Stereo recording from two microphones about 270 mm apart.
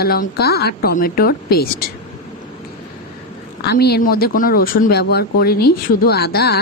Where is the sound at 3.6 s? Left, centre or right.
Left.